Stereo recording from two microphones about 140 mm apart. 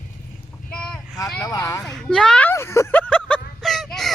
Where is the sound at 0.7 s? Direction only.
5° left (ahead or behind).